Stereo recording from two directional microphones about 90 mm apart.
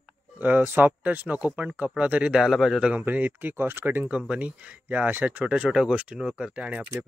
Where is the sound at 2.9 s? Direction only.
20° right (ahead or behind).